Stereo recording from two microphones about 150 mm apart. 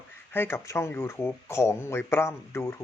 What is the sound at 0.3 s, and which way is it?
Speech, 15° left (ahead or behind).